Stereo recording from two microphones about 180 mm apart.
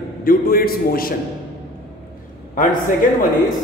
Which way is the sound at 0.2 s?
55° left (ahead or behind).